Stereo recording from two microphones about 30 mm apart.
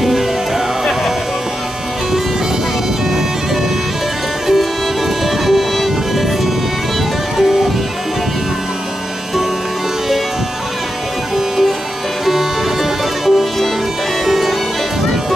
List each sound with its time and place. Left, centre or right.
5.4 s music: centre
11.3 s music: centre
13.2 s music: centre